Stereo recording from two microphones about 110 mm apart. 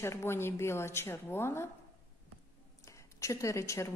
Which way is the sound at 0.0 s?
25° left (ahead or behind).